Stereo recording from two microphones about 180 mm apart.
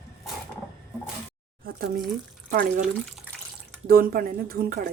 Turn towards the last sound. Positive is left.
turn(degrees=-55)  # may be behind; listen again after turning